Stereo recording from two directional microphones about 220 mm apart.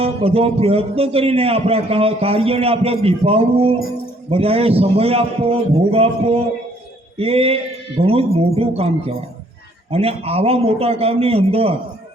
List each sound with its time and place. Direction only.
0.0 s a man's voice: 25° right (ahead or behind)